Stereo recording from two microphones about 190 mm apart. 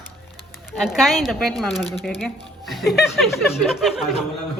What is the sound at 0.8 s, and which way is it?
Speech, centre (ahead or behind).